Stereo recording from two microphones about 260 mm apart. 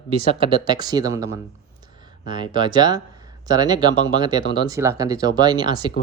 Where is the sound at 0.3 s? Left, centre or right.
Centre.